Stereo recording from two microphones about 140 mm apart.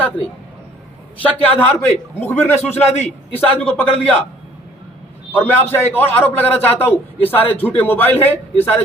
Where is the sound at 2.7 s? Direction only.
50° left (ahead or behind).